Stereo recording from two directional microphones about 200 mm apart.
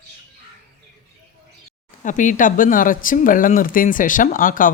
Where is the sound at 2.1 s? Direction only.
40° left (ahead or behind).